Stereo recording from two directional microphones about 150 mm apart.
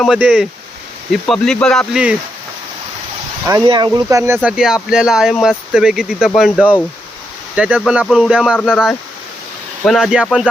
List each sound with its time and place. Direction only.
0.2 s speech: 10° right (ahead or behind)
1.1 s speech: 5° left (ahead or behind)
1.9 s speech: 5° right (ahead or behind)
3.7 s speech: 30° right (ahead or behind)
4.4 s speech: 5° right (ahead or behind)